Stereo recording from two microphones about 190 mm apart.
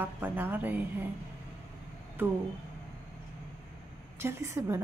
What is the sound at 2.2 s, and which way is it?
Speech, 10° right (ahead or behind).